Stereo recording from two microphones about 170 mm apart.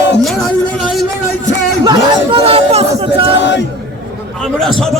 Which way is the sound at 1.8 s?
25° right (ahead or behind).